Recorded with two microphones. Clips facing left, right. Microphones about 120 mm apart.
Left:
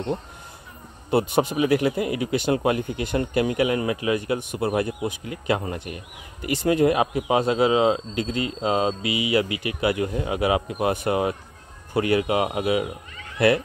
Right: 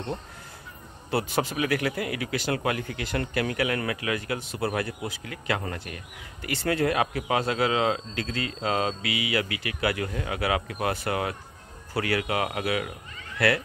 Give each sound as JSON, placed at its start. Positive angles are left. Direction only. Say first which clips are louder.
{"t": 1.1, "sound": "speech", "louder": "left 6 dB", "side_deg": 20}